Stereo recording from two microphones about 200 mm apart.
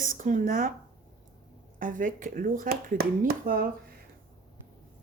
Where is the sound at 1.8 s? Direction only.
40° right (ahead or behind).